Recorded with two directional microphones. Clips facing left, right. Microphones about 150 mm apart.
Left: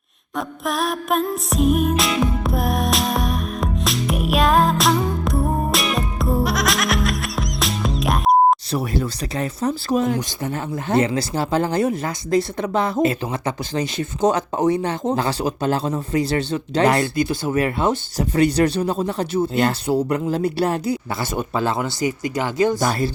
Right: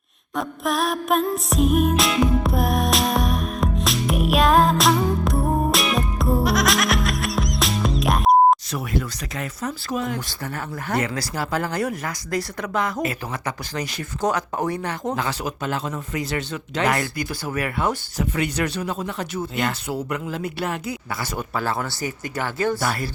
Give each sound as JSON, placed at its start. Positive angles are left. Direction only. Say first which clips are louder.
{"t": 0.3, "sound": "music", "louder": "even", "side_deg": 0}
{"t": 8.7, "sound": "speech", "louder": "left 4 dB", "side_deg": 30}
{"t": 10.2, "sound": "speech", "louder": "left 5 dB", "side_deg": 20}